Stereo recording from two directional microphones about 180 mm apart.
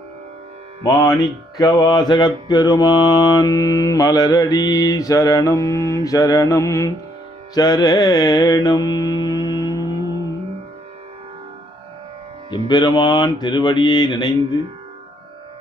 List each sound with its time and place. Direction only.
0.8 s mantra: 20° left (ahead or behind)
12.6 s mantra: 25° left (ahead or behind)